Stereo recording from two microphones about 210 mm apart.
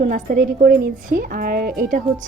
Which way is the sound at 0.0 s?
40° right (ahead or behind).